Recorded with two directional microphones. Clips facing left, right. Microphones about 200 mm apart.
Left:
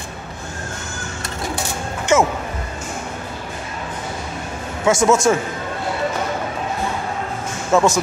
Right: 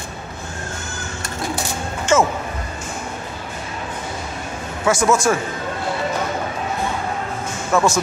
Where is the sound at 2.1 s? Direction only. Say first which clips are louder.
Even; 15° left (ahead or behind).